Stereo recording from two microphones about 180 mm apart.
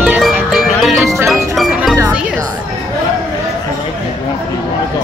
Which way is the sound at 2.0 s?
5° right (ahead or behind).